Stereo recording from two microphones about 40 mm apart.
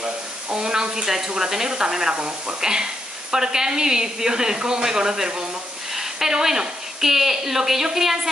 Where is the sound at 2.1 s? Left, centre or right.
Right.